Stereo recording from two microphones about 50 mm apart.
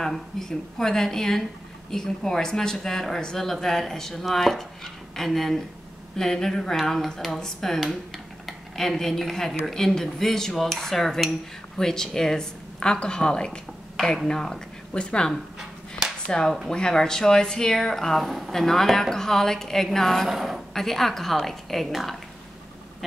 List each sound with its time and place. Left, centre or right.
0.0 s speech: centre
13.9 s speech: centre
18.2 s speech: centre
18.5 s speech: centre
20.2 s speech: centre
20.7 s speech: centre